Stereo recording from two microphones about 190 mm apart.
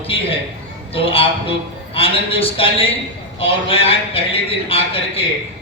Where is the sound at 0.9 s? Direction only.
30° left (ahead or behind).